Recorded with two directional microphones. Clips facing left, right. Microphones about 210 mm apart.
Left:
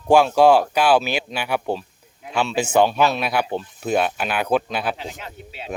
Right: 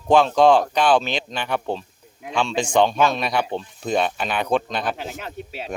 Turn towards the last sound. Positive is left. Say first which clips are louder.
# right 5 dB
turn(degrees=-45)  # may be behind; listen again after turning